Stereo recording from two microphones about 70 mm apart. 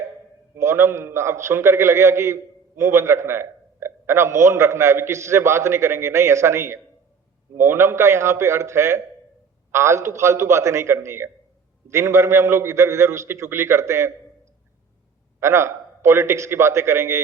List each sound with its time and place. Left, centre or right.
0.5 s a man's voice: right
15.4 s a man's voice: right